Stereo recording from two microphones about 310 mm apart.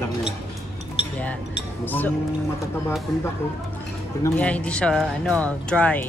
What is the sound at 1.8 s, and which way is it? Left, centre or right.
Speech, centre.